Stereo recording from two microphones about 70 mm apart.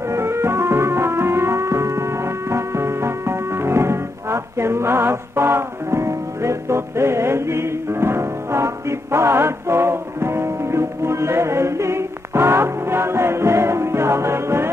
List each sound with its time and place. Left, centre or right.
0.1 s music: right